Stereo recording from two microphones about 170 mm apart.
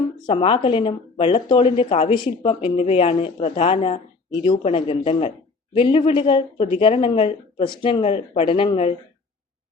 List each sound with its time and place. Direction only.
0.3 s speech: 30° left (ahead or behind)